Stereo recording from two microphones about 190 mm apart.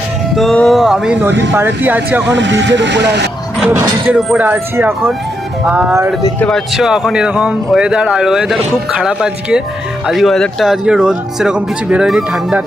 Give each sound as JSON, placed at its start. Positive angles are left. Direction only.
{"t": 0.3, "sound": "speech", "side_deg": 5}
{"t": 1.3, "sound": "speech", "side_deg": -70}
{"t": 1.5, "sound": "speech", "side_deg": -10}
{"t": 2.2, "sound": "speech", "side_deg": -70}
{"t": 3.6, "sound": "speech", "side_deg": -5}
{"t": 6.4, "sound": "speech", "side_deg": 0}